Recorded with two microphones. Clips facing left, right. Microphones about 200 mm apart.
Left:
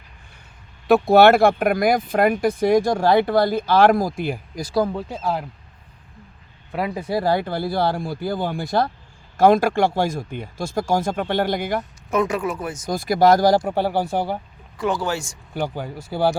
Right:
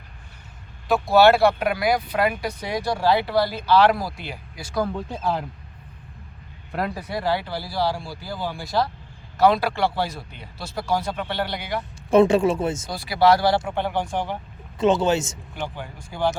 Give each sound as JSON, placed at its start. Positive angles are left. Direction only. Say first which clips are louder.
{"t": 0.9, "sound": "speech", "louder": "left 3 dB", "side_deg": 60}
{"t": 4.9, "sound": "speech", "louder": "left 1 dB", "side_deg": 5}
{"t": 6.7, "sound": "speech", "louder": "left 2 dB", "side_deg": 5}
{"t": 7.1, "sound": "speech", "louder": "left 7 dB", "side_deg": 40}
{"t": 12.1, "sound": "speech", "louder": "right 6 dB", "side_deg": -30}
{"t": 12.9, "sound": "speech", "louder": "left 4 dB", "side_deg": 45}
{"t": 14.8, "sound": "speech", "louder": "right 4 dB", "side_deg": -20}
{"t": 15.5, "sound": "speech", "louder": "left 6 dB", "side_deg": 40}